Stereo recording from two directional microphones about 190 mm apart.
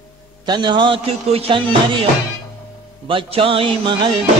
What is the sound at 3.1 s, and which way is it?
Music, 30° right (ahead or behind).